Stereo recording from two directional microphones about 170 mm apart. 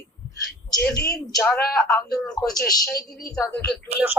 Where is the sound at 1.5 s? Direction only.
20° left (ahead or behind).